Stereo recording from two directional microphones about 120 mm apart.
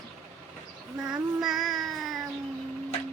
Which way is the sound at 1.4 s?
Centre (ahead or behind).